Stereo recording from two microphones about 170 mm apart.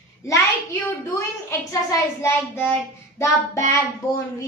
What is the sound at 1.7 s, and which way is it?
A child's voice, 20° left (ahead or behind).